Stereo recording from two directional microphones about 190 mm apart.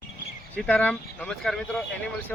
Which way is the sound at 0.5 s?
10° left (ahead or behind).